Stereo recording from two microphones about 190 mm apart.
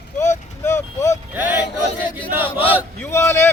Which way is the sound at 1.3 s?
10° right (ahead or behind).